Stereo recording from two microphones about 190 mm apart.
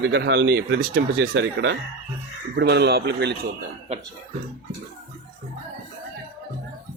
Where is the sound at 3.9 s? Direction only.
35° right (ahead or behind).